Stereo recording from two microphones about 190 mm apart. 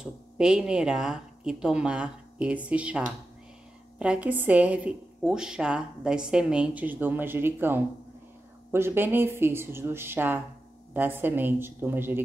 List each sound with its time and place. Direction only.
0.0 s a woman's voice: 5° right (ahead or behind)
4.0 s a woman's voice: 5° right (ahead or behind)